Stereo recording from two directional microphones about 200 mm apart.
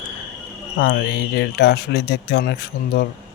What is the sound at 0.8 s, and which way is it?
Speech, 55° left (ahead or behind).